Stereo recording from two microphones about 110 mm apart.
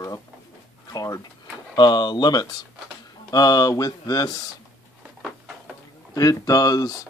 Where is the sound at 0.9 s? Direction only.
30° left (ahead or behind).